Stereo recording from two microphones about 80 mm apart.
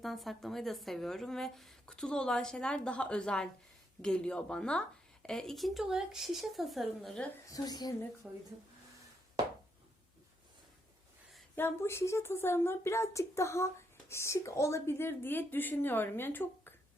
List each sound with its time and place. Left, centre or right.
0.0 s a woman's voice: centre
7.4 s a woman's voice: left
8.2 s speech: centre
11.5 s speech: left